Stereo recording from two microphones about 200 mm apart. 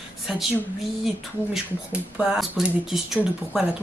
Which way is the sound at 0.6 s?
Centre (ahead or behind).